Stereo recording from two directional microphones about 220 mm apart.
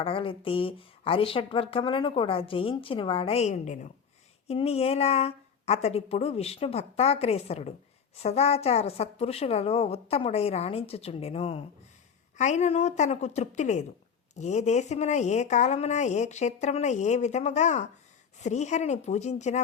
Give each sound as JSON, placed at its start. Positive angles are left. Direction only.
{"t": 0.0, "sound": "speech", "side_deg": 25}